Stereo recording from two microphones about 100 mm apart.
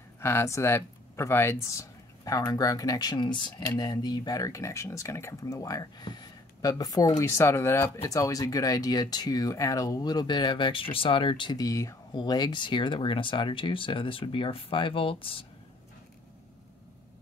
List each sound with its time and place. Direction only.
0.2 s speech: 25° left (ahead or behind); by 11.5 s 55° left (ahead or behind)
11.5 s speech: 35° left (ahead or behind)
12.1 s speech: 45° left (ahead or behind); by 15.4 s 65° left (ahead or behind)